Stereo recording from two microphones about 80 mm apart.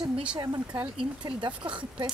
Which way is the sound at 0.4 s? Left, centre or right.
Right.